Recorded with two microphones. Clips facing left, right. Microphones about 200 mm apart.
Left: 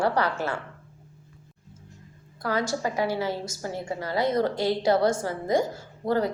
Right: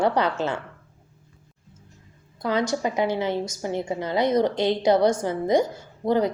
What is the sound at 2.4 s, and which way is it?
A woman's voice, 20° right (ahead or behind).